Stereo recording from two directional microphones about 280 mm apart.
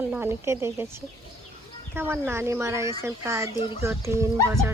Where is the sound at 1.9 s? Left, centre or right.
Centre.